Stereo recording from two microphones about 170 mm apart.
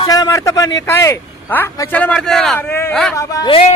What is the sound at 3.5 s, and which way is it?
Speech, 35° left (ahead or behind).